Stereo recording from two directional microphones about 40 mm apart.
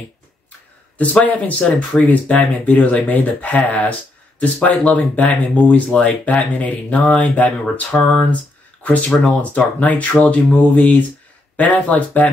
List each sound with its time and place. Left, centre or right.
1.2 s speech: left